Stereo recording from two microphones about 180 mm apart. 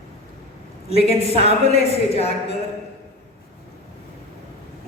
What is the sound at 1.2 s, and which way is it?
Speech, 35° left (ahead or behind).